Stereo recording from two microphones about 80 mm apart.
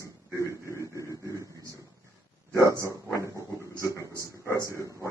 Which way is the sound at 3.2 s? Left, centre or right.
Right.